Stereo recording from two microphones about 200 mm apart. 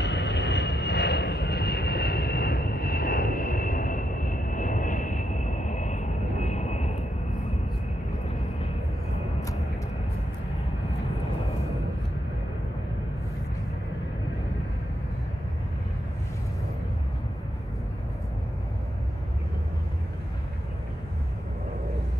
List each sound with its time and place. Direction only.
0.0 s vehicle: 60° left (ahead or behind); by 6.9 s 35° left (ahead or behind)